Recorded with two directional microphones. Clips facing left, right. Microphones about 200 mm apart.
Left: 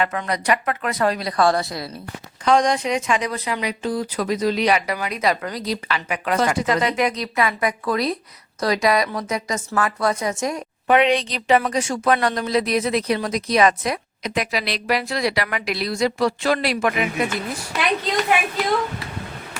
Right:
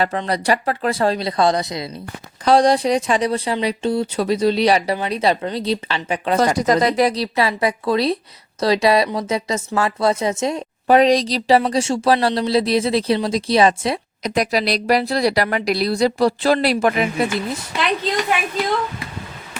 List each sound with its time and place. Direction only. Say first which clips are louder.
0.0 s speech: right 3 dB; 30° right (ahead or behind)
2.4 s a woman's voice: right 4 dB; 35° right (ahead or behind)